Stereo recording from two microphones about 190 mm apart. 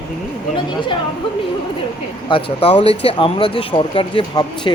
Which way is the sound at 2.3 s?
25° left (ahead or behind).